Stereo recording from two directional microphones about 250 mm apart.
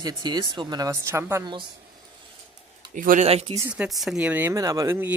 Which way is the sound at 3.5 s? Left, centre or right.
Centre.